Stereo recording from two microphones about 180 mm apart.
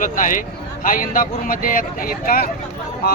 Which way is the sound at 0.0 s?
45° left (ahead or behind).